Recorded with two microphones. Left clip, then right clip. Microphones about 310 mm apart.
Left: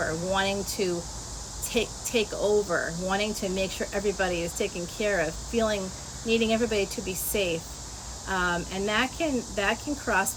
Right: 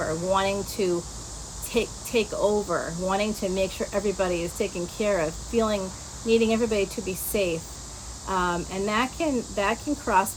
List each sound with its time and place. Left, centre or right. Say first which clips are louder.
0.3 s speech: right 5 dB; centre